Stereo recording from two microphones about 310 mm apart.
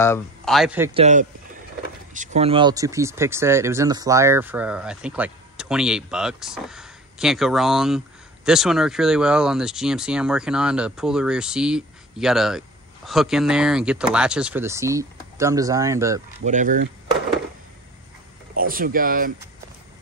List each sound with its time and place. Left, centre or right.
0.0 s speech: centre
0.9 s speech: right
16.3 s speech: right
18.6 s speech: right